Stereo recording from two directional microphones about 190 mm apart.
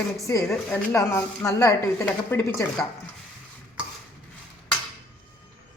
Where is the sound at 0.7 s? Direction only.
15° left (ahead or behind).